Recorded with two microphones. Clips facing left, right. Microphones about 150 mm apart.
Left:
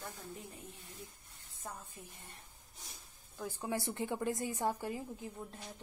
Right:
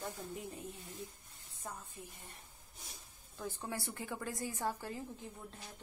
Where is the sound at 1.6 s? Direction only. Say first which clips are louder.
Even; centre (ahead or behind).